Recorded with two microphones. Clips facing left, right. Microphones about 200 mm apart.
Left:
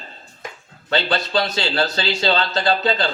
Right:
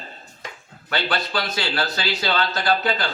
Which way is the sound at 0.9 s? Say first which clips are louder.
Left 4 dB; 25° left (ahead or behind).